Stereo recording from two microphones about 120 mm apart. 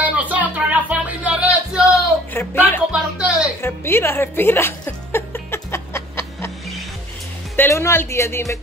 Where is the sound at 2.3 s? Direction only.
20° left (ahead or behind).